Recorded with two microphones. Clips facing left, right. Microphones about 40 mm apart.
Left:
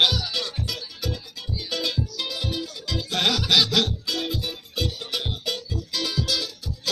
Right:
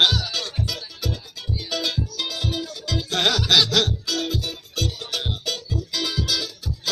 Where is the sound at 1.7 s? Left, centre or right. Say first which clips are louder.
Right 1 dB; centre.